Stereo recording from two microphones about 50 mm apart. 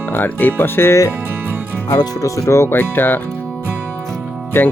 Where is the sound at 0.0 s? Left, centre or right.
Left.